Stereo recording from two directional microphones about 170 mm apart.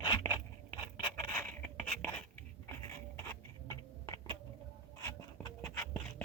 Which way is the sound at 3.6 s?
20° left (ahead or behind).